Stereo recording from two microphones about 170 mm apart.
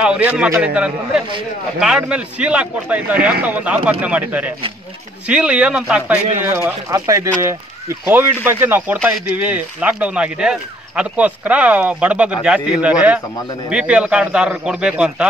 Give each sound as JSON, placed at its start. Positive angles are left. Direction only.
{"t": 0.0, "sound": "a man's voice", "side_deg": -5}